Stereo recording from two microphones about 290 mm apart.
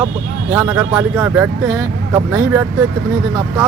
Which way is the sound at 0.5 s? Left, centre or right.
Centre.